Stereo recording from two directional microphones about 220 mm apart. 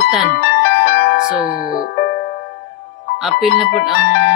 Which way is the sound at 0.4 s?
45° left (ahead or behind).